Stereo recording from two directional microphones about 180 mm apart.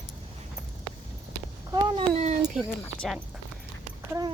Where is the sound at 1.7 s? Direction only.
35° right (ahead or behind).